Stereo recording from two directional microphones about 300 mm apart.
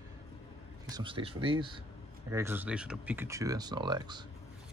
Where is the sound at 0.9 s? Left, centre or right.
Centre.